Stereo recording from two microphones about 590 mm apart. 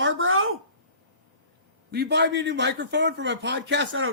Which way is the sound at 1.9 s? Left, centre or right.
Centre.